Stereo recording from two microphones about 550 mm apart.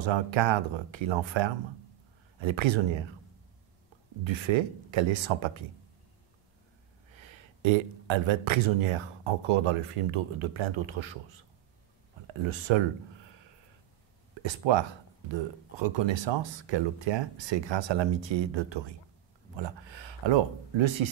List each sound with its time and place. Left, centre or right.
0.0 s speech: right
4.2 s speech: right
7.2 s speech: right
12.4 s speech: right
14.3 s speech: right
19.5 s a sound: right